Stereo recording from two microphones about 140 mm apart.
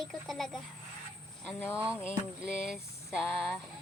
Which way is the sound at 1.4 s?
15° left (ahead or behind).